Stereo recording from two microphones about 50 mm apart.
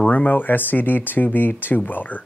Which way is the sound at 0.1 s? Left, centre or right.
Left.